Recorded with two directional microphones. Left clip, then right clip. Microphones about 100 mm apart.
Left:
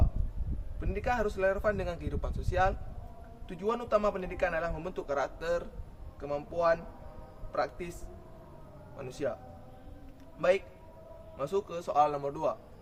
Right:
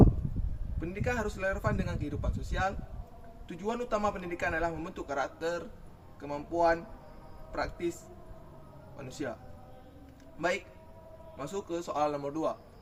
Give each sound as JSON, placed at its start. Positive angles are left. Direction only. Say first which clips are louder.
{"t": 0.8, "sound": "a man's voice", "louder": "left 2 dB", "side_deg": -10}
{"t": 9.0, "sound": "a man's voice", "louder": "left 4 dB", "side_deg": -5}
{"t": 11.3, "sound": "a man's voice", "louder": "left 3 dB", "side_deg": -5}